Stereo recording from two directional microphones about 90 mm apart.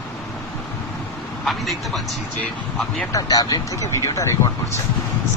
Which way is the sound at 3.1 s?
45° left (ahead or behind).